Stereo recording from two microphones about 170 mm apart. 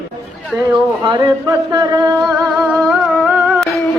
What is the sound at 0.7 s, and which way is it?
Speech, 25° right (ahead or behind).